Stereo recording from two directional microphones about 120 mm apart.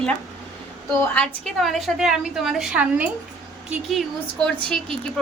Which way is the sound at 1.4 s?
Centre (ahead or behind).